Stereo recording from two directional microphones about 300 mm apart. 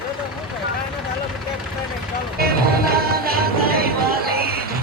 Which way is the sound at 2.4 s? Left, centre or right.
Right.